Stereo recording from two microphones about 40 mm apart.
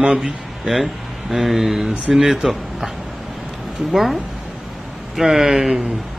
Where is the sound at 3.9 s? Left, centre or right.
Centre.